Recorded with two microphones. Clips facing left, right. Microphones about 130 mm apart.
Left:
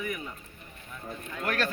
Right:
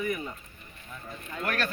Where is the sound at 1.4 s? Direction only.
20° left (ahead or behind).